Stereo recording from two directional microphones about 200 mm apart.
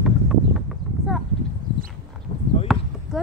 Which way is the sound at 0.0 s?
Centre (ahead or behind).